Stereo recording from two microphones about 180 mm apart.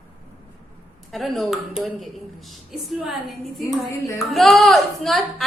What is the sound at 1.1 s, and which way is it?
A woman's voice, centre (ahead or behind).